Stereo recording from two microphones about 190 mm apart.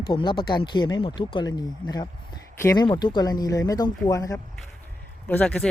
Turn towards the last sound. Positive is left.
turn(degrees=5)  # may be behind; listen again after turning